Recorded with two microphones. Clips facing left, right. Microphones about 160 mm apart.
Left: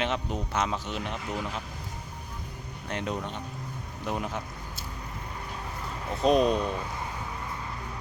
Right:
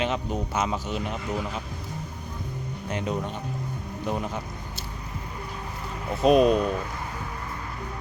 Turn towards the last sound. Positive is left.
turn(degrees=-5)  # may be behind; listen again after turning